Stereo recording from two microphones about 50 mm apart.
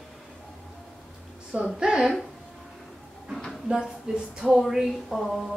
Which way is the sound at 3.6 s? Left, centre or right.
Centre.